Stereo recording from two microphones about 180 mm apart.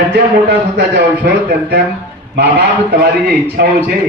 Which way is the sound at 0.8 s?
70° right (ahead or behind).